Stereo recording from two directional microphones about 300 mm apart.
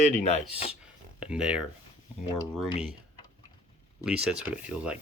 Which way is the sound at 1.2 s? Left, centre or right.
Centre.